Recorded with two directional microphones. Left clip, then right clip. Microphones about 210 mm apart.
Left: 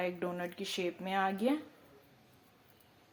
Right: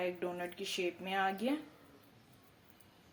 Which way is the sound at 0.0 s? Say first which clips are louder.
Left 2 dB; 30° left (ahead or behind).